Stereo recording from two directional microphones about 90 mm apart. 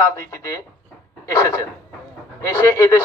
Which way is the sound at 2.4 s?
35° left (ahead or behind).